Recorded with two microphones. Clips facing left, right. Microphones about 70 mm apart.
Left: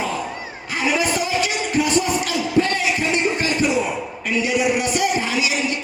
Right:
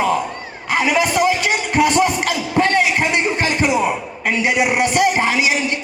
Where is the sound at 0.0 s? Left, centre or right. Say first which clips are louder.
Right 6 dB; right.